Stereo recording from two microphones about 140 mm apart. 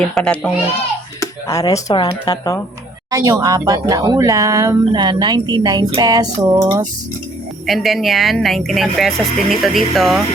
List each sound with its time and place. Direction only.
0.1 s a child's voice: 5° left (ahead or behind)
1.2 s speech: 25° left (ahead or behind)
3.1 s speech: 25° right (ahead or behind)
7.7 s speech: centre (ahead or behind)